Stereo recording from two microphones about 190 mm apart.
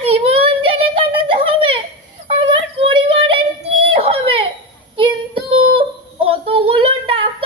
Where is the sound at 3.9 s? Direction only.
30° right (ahead or behind).